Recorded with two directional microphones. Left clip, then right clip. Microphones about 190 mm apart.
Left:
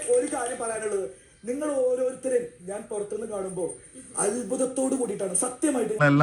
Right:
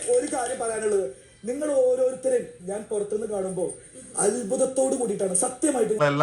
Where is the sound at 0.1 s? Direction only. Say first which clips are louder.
Right 1 dB; 30° left (ahead or behind).